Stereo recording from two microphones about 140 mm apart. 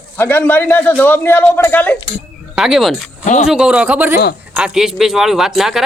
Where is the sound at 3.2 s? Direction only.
60° left (ahead or behind).